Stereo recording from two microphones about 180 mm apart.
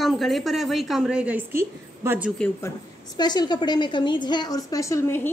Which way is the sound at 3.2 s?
25° left (ahead or behind).